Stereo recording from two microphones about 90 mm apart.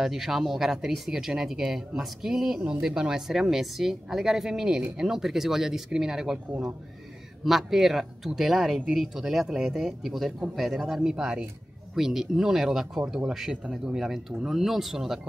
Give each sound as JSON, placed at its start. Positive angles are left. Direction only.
{"t": 0.0, "sound": "speech", "side_deg": -5}
{"t": 7.4, "sound": "speech", "side_deg": 0}